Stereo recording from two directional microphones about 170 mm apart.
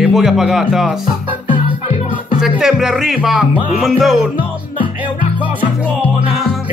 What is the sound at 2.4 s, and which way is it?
Speech, centre (ahead or behind).